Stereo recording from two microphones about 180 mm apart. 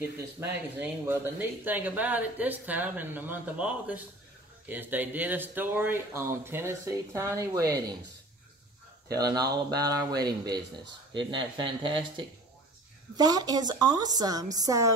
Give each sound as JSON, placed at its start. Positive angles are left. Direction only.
{"t": 0.2, "sound": "speech", "side_deg": -15}
{"t": 9.1, "sound": "a woman's voice", "side_deg": -20}